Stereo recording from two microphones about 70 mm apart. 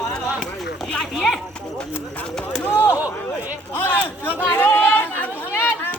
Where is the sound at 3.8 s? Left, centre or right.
Left.